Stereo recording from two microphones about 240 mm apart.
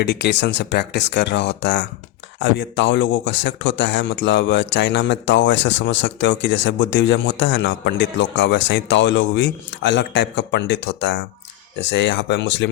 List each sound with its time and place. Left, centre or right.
0.0 s speech: left